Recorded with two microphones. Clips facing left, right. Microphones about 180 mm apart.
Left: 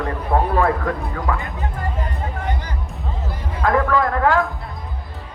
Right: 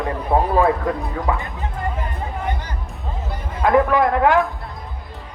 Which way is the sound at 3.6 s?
20° right (ahead or behind).